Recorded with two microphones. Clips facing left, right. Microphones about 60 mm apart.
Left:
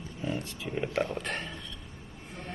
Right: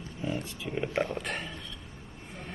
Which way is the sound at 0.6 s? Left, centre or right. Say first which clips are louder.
Even; centre.